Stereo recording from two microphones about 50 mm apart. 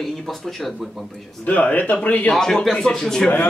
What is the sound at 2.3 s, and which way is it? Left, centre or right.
Speech, centre.